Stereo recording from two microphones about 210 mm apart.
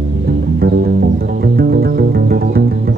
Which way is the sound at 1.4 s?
45° right (ahead or behind).